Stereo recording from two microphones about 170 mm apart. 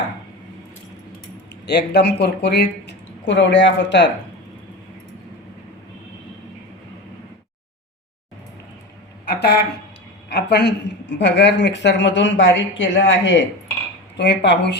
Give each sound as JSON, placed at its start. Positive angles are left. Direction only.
{"t": 1.6, "sound": "speech", "side_deg": 75}
{"t": 9.2, "sound": "a sound", "side_deg": 75}
{"t": 10.2, "sound": "a woman's voice", "side_deg": 75}